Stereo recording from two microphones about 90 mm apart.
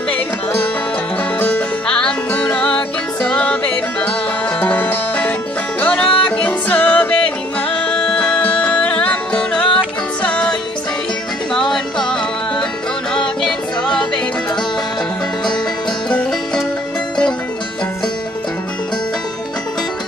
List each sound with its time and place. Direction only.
1.4 s music: 15° left (ahead or behind)
11.5 s music: 5° left (ahead or behind)
16.1 s music: 15° left (ahead or behind)